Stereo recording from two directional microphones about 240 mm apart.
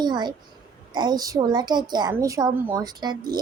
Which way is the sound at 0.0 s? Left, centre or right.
Centre.